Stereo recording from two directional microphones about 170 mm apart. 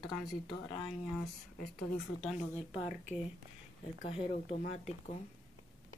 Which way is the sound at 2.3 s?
40° left (ahead or behind).